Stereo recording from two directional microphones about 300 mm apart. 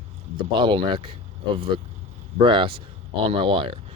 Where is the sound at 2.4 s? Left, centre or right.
Centre.